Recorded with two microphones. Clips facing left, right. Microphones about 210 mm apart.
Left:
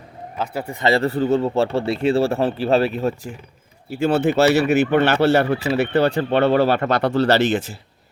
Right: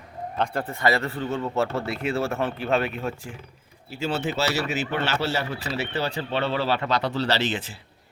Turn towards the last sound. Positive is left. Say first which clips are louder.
# left 8 dB
turn(degrees=45)  # may be behind; listen again after turning